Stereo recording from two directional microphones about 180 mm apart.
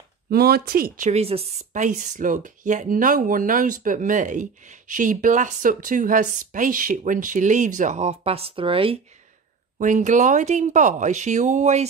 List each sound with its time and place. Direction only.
0.3 s a woman's voice: 60° right (ahead or behind); by 9.0 s 30° right (ahead or behind)
9.8 s a woman's voice: 45° right (ahead or behind)